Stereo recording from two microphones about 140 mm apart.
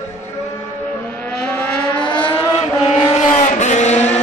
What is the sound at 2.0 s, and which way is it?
Vehicle, 35° left (ahead or behind).